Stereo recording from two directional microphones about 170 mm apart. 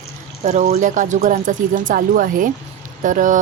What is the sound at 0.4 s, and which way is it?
Speech, 45° right (ahead or behind).